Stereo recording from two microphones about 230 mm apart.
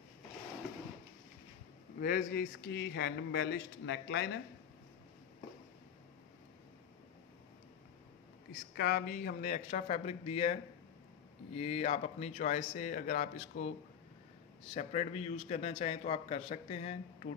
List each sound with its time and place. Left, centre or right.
2.0 s speech: left
8.7 s speech: left
14.7 s a man's voice: left